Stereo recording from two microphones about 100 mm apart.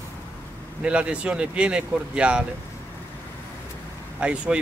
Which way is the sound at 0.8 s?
10° right (ahead or behind).